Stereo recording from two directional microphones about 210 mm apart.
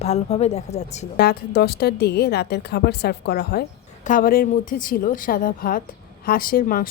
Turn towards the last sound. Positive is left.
turn(degrees=45)  # may be behind; listen again after turning